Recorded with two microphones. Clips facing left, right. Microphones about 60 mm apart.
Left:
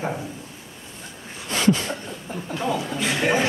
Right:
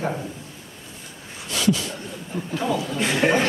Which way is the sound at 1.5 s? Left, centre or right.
Left.